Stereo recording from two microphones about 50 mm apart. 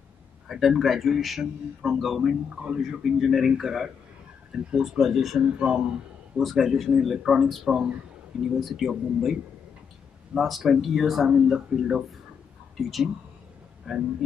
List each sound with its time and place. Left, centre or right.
0.5 s a man's voice: centre
5.4 s speech: centre
6.4 s a man's voice: centre
11.2 s a man's voice: centre
13.9 s speech: centre